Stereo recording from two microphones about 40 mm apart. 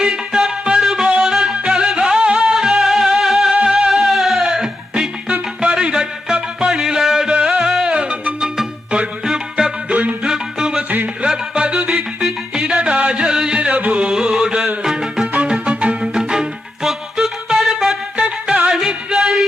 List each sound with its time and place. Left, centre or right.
0.0 s music: centre
0.8 s music: centre; by 2.6 s right
2.6 s music: centre
3.5 s music: right
3.9 s music: centre
7.3 s music: right
9.9 s music: right
10.2 s music: centre
12.8 s music: right
15.4 s music: right
16.1 s music: centre
18.2 s music: right
18.7 s music: centre